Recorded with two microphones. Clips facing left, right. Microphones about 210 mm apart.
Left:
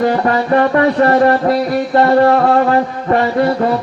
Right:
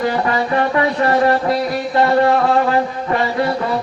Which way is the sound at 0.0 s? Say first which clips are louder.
Left 4 dB; 45° left (ahead or behind).